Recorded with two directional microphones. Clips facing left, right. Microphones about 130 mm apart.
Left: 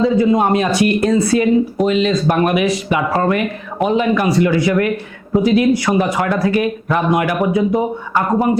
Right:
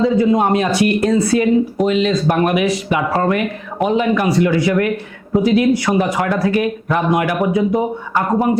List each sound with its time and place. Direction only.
0.0 s speech: 20° left (ahead or behind)